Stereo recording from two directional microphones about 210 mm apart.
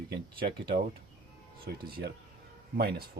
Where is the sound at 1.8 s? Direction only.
45° right (ahead or behind).